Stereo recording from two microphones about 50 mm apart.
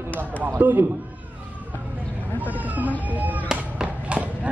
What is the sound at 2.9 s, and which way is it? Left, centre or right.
Music, right.